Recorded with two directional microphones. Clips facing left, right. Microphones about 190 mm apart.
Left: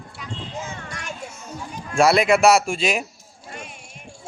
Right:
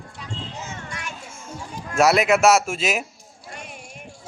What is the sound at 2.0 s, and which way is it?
Speech, 5° right (ahead or behind).